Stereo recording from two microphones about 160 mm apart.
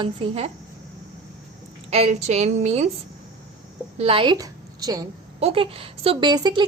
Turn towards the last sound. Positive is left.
turn(degrees=-25)  # may be behind; listen again after turning